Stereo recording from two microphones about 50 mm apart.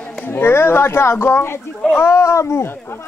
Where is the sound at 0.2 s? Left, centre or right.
Left.